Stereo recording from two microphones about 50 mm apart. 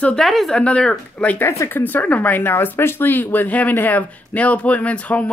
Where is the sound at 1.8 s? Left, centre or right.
Left.